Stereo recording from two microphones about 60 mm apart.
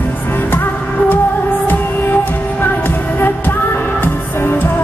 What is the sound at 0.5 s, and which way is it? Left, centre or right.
Music, left.